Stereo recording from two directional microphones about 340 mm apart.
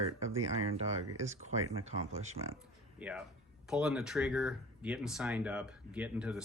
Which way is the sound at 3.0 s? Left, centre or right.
Centre.